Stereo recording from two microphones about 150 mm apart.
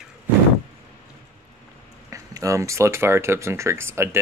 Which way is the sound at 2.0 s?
20° right (ahead or behind).